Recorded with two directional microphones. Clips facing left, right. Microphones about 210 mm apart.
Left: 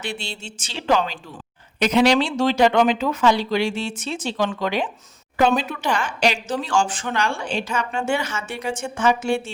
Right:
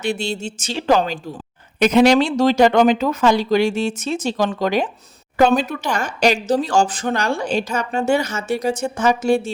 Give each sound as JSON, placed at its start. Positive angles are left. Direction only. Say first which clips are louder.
{"t": 0.0, "sound": "speech", "louder": "right 9 dB", "side_deg": -45}